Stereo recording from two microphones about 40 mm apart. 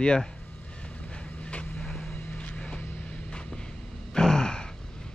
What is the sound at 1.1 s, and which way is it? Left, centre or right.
Vehicle, left.